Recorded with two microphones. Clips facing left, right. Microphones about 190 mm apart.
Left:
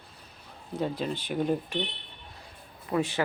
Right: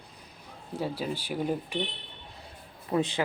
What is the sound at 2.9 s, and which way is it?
Speech, 20° right (ahead or behind).